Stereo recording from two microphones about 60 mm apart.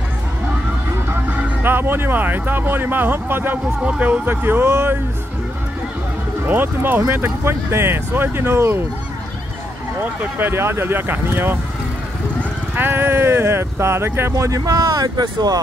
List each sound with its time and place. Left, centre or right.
1.6 s speech: right
3.8 s speech: right
6.4 s speech: right
7.4 s speech: right
9.9 s speech: right
12.7 s speech: right
14.3 s speech: right